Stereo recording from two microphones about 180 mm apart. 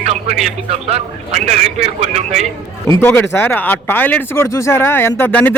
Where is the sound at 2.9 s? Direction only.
10° left (ahead or behind).